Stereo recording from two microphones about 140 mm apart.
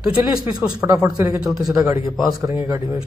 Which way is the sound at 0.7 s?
25° right (ahead or behind).